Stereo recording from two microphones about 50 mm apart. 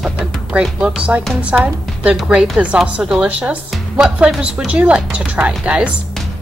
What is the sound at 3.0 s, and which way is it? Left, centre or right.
Speech, centre.